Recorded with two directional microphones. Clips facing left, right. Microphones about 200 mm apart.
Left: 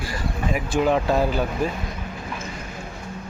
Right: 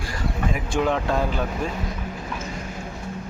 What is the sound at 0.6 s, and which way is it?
Speech, 5° left (ahead or behind).